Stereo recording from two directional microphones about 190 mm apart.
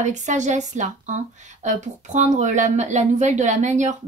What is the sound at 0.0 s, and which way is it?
Speech, 40° right (ahead or behind).